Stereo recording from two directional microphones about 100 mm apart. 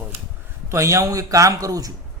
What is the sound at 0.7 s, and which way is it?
A man's voice, 30° right (ahead or behind).